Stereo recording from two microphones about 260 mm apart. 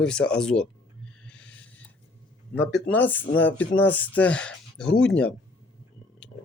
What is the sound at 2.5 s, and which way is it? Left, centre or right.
Speech, centre.